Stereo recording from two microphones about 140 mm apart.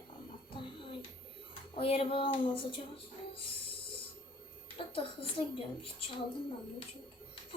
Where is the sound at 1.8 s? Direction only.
40° left (ahead or behind).